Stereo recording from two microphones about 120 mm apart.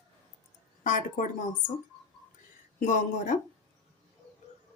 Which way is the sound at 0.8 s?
90° left.